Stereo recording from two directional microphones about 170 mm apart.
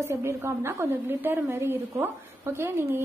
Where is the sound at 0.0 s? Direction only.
15° right (ahead or behind).